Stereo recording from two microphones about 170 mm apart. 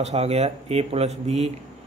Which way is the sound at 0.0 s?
40° right (ahead or behind).